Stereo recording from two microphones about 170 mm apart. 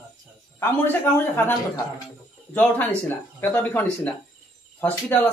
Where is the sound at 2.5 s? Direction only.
10° left (ahead or behind).